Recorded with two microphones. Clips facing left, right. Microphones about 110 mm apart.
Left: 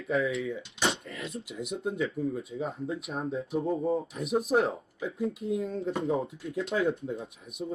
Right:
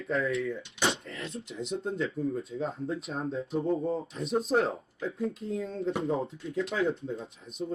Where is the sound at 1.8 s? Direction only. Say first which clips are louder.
Left 2 dB; 5° left (ahead or behind).